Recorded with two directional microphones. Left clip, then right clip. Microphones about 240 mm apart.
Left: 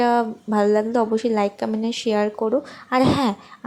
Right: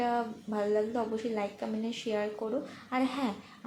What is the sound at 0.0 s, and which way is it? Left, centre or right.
A woman's voice, left.